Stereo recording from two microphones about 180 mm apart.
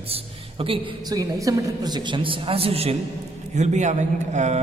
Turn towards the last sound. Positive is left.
turn(degrees=-40)  # may be behind; listen again after turning